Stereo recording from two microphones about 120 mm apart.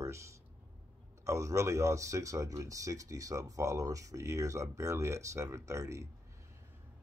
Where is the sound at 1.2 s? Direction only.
25° right (ahead or behind).